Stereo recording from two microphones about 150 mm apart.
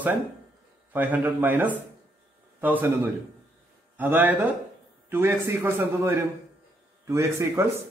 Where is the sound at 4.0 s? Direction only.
10° right (ahead or behind).